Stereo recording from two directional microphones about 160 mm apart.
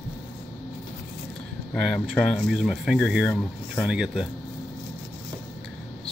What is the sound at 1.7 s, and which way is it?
Speech, 5° left (ahead or behind).